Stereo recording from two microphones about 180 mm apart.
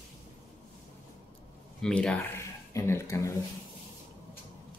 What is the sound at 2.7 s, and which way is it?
Speech, 15° left (ahead or behind).